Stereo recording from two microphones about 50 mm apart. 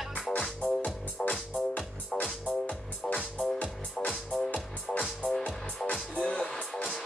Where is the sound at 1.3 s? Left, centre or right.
Left.